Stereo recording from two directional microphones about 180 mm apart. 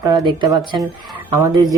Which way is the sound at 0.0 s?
25° right (ahead or behind).